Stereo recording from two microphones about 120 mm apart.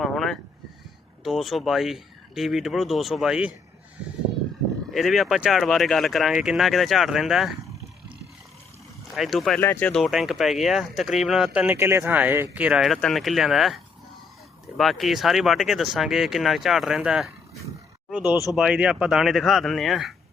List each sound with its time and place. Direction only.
0.0 s a sound: 5° left (ahead or behind)
1.2 s speech: centre (ahead or behind)
4.9 s speech: centre (ahead or behind)
9.1 s speech: centre (ahead or behind)
9.6 s speech: 15° left (ahead or behind)
9.9 s speech: centre (ahead or behind)
11.6 s speech: 20° right (ahead or behind)
12.8 s speech: 5° left (ahead or behind)